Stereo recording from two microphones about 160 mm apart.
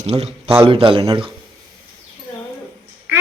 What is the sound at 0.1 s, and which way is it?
Speech, 45° right (ahead or behind).